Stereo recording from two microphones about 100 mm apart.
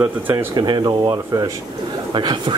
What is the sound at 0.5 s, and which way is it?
Speech, 45° right (ahead or behind).